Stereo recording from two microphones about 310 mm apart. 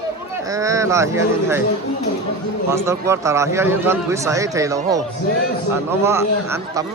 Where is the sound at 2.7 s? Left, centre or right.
Centre.